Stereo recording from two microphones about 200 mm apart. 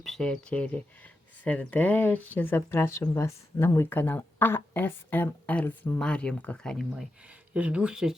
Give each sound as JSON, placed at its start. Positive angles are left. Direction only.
{"t": 0.0, "sound": "speech", "side_deg": 0}